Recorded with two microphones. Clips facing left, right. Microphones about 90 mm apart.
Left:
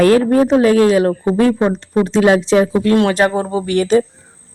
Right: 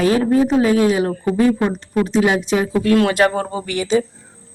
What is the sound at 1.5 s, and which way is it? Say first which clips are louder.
Speech: left 4 dB; 25° left (ahead or behind).